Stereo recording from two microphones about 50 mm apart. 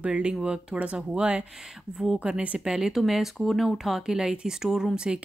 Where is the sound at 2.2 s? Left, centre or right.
Right.